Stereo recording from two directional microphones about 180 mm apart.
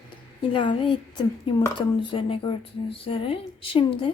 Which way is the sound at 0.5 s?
25° left (ahead or behind).